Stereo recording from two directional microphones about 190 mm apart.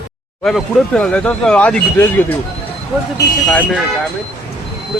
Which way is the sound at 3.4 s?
5° left (ahead or behind).